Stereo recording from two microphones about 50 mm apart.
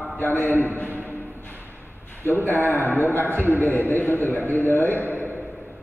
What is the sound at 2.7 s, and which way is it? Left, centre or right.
A man's voice, left.